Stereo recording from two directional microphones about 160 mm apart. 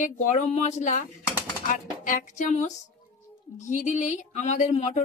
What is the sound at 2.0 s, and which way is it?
A woman's voice, 50° left (ahead or behind).